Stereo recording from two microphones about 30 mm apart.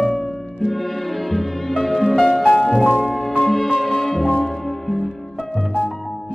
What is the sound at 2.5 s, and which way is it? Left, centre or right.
Music, centre.